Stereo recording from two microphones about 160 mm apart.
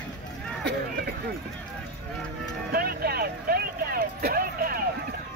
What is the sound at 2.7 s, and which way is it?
Speech, 75° right (ahead or behind).